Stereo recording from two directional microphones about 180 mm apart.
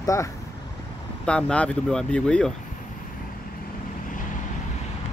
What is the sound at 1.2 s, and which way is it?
Speech, 5° left (ahead or behind).